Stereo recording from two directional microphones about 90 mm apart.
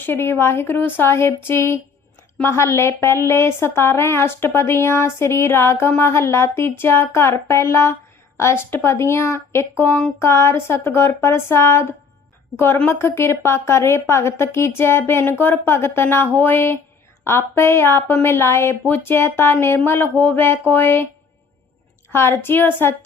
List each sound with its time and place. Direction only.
0.0 s speech: 25° left (ahead or behind)
22.1 s speech: 30° left (ahead or behind)